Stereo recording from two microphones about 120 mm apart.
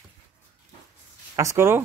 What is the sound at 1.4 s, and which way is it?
Speech, 25° right (ahead or behind).